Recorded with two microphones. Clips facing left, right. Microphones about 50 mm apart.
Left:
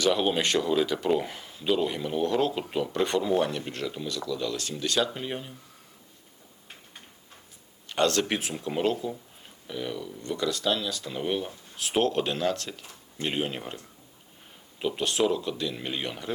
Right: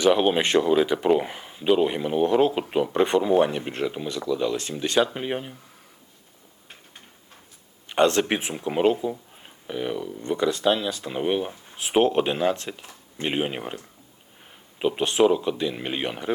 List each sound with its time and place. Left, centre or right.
0.0 s speech: right
7.9 s speech: right
14.8 s speech: right